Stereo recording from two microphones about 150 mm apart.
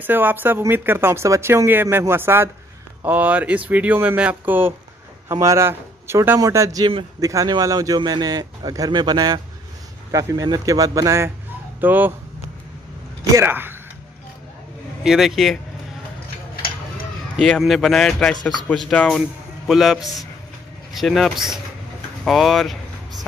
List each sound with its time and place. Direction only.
0.0 s a man's voice: 10° right (ahead or behind)
13.4 s speech: 15° right (ahead or behind)
15.0 s speech: centre (ahead or behind)
17.4 s speech: centre (ahead or behind)